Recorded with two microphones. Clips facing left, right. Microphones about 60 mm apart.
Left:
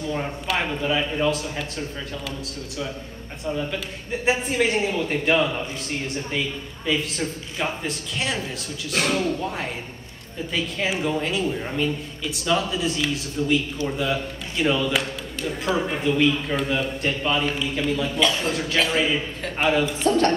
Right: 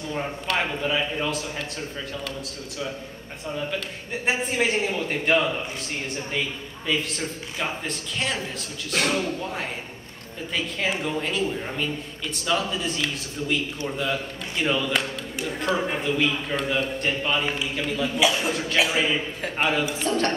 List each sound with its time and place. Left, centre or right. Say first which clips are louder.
0.1 s a man's voice: even; centre
4.3 s a man's voice: left 2 dB; centre
7.5 s a man's voice: left 2 dB; centre
10.8 s a man's voice: left 3 dB; centre